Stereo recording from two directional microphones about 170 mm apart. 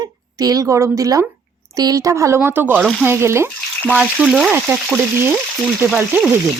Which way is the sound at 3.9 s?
5° right (ahead or behind).